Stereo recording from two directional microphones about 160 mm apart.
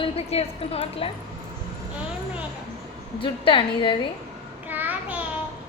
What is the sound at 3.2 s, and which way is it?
Speech, 30° left (ahead or behind).